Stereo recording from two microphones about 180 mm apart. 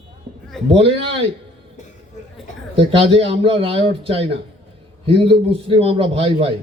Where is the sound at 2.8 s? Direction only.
30° right (ahead or behind).